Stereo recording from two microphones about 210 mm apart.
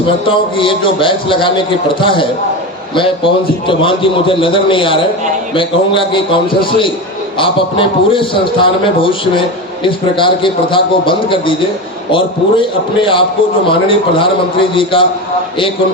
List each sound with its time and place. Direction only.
0.3 s a man's voice: 25° left (ahead or behind)